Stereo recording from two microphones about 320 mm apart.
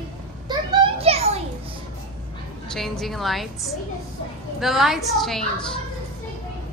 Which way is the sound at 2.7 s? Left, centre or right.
Centre.